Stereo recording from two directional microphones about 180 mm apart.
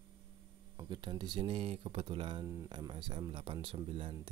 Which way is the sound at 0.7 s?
25° right (ahead or behind).